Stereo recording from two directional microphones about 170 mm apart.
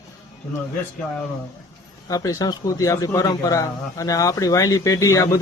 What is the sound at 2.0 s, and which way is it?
Speech, 20° left (ahead or behind).